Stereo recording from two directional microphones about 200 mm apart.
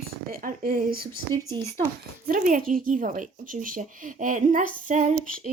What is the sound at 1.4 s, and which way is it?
Speech, 15° right (ahead or behind).